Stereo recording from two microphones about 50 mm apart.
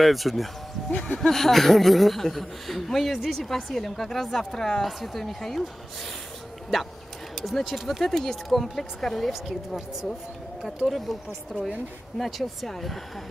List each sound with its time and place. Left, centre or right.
0.0 s speech: centre
0.9 s speech: centre
1.2 s a woman's voice: centre
7.4 s a woman's voice: centre
9.3 s a woman's voice: centre
10.9 s a woman's voice: centre